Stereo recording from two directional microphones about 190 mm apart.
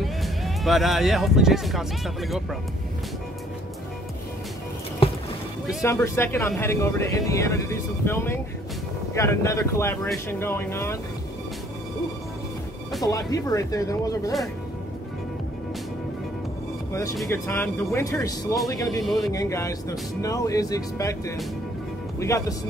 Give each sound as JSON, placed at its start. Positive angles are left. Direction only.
{"t": 0.0, "sound": "speech", "side_deg": 0}
{"t": 5.0, "sound": "music", "side_deg": 30}
{"t": 5.8, "sound": "speech", "side_deg": 15}
{"t": 13.0, "sound": "speech", "side_deg": 20}
{"t": 17.3, "sound": "speech", "side_deg": 10}
{"t": 19.0, "sound": "speech", "side_deg": 0}
{"t": 19.3, "sound": "speech", "side_deg": 15}